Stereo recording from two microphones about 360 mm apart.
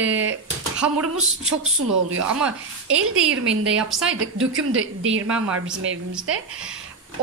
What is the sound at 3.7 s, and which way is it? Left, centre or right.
Speech, centre.